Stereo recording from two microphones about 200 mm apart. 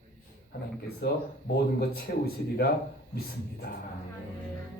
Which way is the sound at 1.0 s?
55° left (ahead or behind).